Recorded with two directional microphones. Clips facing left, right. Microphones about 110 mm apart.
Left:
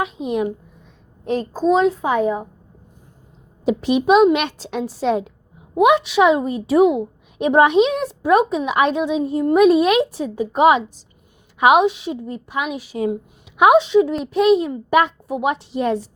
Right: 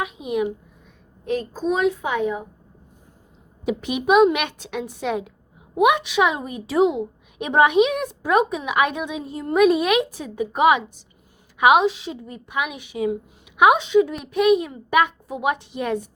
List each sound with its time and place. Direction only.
0.0 s a child's voice: 30° left (ahead or behind)
3.7 s a woman's voice: 30° left (ahead or behind)